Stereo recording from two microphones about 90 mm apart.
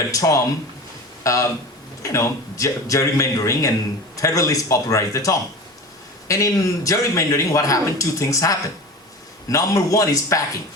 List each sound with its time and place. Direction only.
0.1 s a man's voice: 35° left (ahead or behind)